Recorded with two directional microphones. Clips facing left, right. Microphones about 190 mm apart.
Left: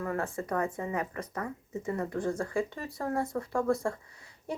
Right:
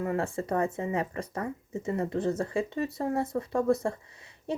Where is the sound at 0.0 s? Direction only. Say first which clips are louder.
Right 3 dB; 25° right (ahead or behind).